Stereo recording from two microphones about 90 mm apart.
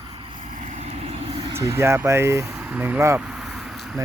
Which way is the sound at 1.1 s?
80° right.